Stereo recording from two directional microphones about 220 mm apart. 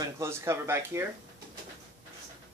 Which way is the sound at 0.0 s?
10° right (ahead or behind).